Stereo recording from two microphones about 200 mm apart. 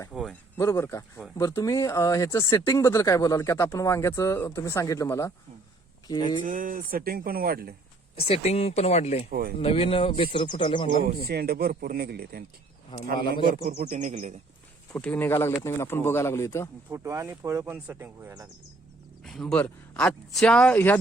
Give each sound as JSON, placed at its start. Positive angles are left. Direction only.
{"t": 0.1, "sound": "speech", "side_deg": 0}
{"t": 0.5, "sound": "speech", "side_deg": 15}
{"t": 6.4, "sound": "speech", "side_deg": -40}
{"t": 8.1, "sound": "speech", "side_deg": 30}
{"t": 11.3, "sound": "speech", "side_deg": -50}
{"t": 12.9, "sound": "speech", "side_deg": 20}
{"t": 13.4, "sound": "speech", "side_deg": -40}
{"t": 14.9, "sound": "speech", "side_deg": 10}
{"t": 16.9, "sound": "speech", "side_deg": -15}
{"t": 19.2, "sound": "speech", "side_deg": 0}